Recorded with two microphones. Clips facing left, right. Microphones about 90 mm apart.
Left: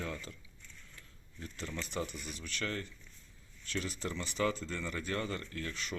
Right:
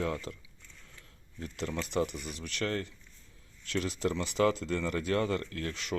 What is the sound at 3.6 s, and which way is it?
Speech, 80° right.